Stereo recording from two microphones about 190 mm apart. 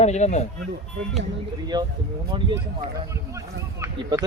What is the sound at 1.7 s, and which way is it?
Speech, 25° right (ahead or behind).